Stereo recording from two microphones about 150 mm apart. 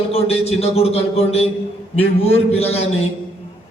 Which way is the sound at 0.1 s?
45° left (ahead or behind).